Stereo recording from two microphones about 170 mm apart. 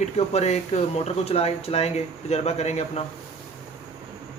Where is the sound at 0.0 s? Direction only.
40° left (ahead or behind).